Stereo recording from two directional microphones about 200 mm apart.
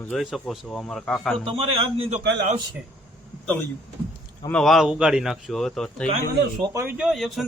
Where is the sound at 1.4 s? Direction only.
25° right (ahead or behind).